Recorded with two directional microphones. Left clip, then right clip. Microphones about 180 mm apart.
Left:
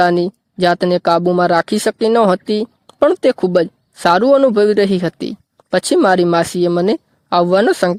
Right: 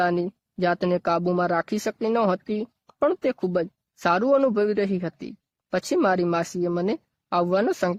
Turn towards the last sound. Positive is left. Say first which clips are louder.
# left 10 dB
turn(degrees=40)  # may be behind; listen again after turning